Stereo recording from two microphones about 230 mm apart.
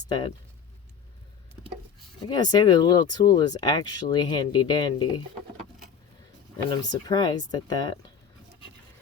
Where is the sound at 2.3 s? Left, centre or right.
Centre.